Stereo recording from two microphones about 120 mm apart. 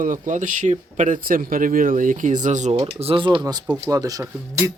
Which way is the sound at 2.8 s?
45° right (ahead or behind).